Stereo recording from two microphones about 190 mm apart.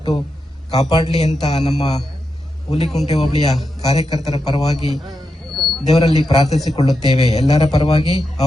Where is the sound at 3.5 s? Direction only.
Centre (ahead or behind).